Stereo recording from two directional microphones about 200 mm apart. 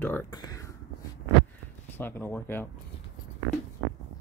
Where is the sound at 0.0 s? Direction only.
10° left (ahead or behind).